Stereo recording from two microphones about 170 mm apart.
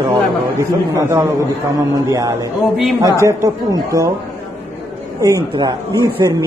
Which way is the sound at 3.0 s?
20° right (ahead or behind).